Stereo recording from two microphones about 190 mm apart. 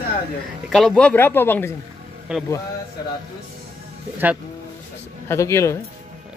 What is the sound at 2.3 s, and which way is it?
Speech, 5° right (ahead or behind).